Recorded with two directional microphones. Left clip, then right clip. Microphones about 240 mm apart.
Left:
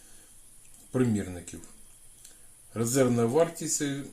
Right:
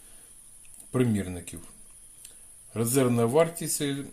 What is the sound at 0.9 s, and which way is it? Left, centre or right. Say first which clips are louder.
Speech: right 1 dB; right.